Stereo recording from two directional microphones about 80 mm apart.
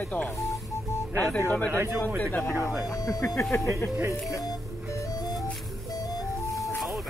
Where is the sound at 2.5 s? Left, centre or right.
Centre.